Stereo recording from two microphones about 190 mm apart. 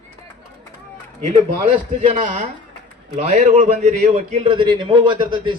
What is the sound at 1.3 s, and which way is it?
A man's voice, 40° right (ahead or behind).